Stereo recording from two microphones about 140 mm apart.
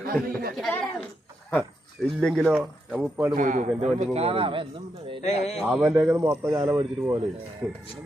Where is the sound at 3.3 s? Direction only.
65° right (ahead or behind).